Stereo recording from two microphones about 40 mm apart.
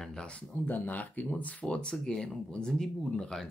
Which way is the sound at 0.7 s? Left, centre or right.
Left.